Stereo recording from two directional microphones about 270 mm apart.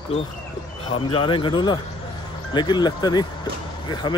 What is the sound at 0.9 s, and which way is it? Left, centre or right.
Speech, centre.